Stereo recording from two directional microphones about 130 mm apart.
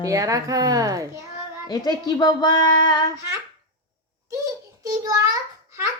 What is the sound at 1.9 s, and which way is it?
Speech, 30° left (ahead or behind).